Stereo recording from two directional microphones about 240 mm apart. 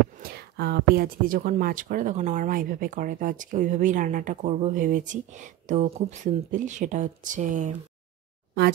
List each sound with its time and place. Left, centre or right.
0.2 s speech: right